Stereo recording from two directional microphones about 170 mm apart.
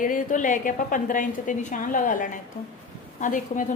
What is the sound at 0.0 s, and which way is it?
A woman's voice, 50° left (ahead or behind).